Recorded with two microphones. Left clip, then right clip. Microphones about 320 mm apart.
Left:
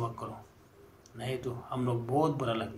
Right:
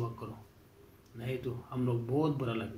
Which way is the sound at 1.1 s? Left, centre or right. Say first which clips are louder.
Left 2 dB; left.